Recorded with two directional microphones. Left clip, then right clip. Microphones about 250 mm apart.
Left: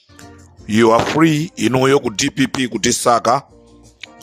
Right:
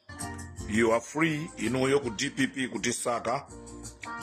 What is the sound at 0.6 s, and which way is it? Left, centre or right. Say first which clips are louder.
A man's voice: left 13 dB; left.